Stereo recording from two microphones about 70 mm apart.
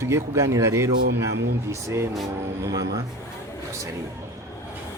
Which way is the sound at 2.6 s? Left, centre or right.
Right.